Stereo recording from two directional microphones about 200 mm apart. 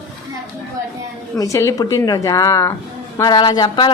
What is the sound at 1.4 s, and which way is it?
A woman's voice, 15° left (ahead or behind).